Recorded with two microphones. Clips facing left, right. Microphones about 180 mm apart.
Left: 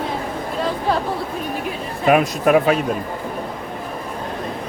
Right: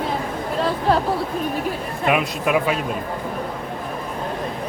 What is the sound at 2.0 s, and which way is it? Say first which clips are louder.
Speech: left 5 dB; 40° left (ahead or behind).